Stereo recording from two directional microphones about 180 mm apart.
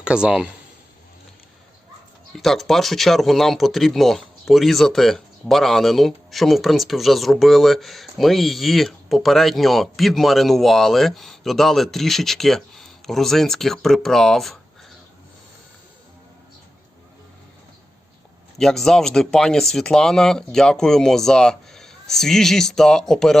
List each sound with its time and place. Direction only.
0.0 s speech: 5° right (ahead or behind)
2.4 s speech: centre (ahead or behind)
18.5 s speech: centre (ahead or behind)